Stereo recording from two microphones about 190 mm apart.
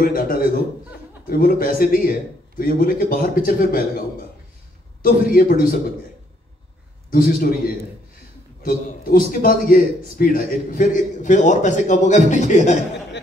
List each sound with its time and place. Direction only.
0.0 s a man's voice: 50° left (ahead or behind)
5.0 s a man's voice: 50° left (ahead or behind)
7.1 s a man's voice: 50° left (ahead or behind)
8.6 s a man's voice: 45° left (ahead or behind)